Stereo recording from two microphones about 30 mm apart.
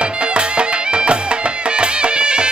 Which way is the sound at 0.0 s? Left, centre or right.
Right.